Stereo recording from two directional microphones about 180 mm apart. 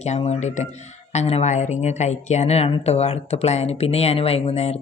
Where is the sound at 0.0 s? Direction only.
40° left (ahead or behind).